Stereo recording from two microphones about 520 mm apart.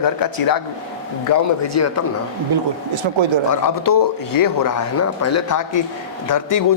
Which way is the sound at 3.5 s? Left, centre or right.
Left.